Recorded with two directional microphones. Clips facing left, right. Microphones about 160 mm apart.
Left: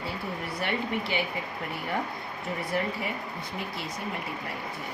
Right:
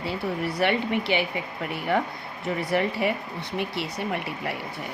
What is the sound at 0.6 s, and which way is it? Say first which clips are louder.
Speech: right 6 dB; 80° right.